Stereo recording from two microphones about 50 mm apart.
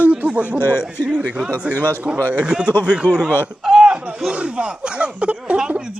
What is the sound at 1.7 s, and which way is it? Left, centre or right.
Speech, left.